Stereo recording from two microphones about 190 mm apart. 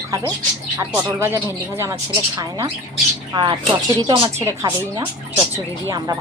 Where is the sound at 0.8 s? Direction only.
15° right (ahead or behind).